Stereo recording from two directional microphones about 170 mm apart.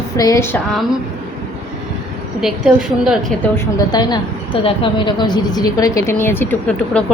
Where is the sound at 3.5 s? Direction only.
25° left (ahead or behind); by 7.0 s 10° left (ahead or behind).